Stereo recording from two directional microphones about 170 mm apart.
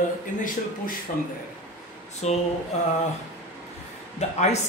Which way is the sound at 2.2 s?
40° left (ahead or behind).